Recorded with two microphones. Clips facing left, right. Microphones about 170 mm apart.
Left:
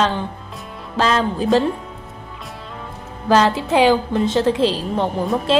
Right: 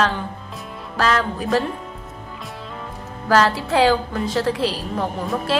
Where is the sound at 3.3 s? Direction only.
20° left (ahead or behind).